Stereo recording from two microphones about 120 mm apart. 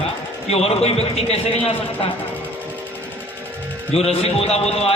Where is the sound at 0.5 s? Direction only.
60° left (ahead or behind).